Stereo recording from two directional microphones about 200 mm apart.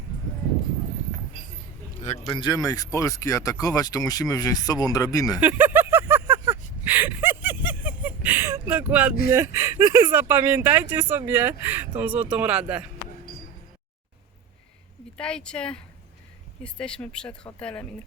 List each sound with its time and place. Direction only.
2.0 s speech: 25° left (ahead or behind)
5.4 s a sound: 10° right (ahead or behind)
9.3 s speech: 15° right (ahead or behind)
15.2 s speech: 5° left (ahead or behind)